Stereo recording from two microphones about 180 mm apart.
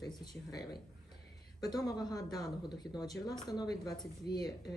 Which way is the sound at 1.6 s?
20° left (ahead or behind).